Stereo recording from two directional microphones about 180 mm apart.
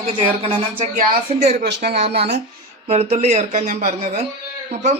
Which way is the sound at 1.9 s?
35° right (ahead or behind).